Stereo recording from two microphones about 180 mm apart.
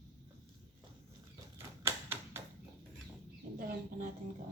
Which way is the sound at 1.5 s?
15° right (ahead or behind).